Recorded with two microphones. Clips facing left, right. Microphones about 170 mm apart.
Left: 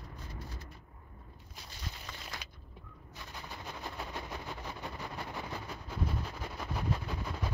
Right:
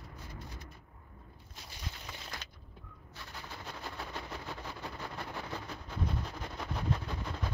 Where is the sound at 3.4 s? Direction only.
20° left (ahead or behind).